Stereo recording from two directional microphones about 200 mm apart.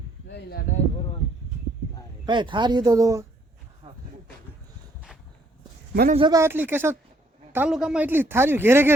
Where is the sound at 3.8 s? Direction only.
30° right (ahead or behind).